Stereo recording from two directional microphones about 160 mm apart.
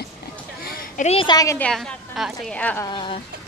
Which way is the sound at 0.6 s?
65° left (ahead or behind).